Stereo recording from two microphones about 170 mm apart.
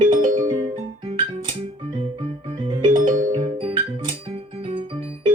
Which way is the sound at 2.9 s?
50° right (ahead or behind).